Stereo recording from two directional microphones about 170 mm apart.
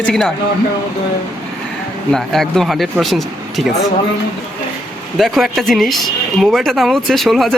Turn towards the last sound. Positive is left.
turn(degrees=0)  # may be behind; listen again after turning